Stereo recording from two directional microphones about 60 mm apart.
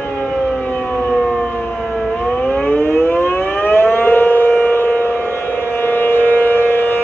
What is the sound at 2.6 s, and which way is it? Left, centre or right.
Civil defense siren, left.